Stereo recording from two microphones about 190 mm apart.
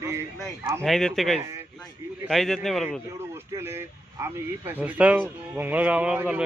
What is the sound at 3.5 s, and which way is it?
Speech, 15° right (ahead or behind).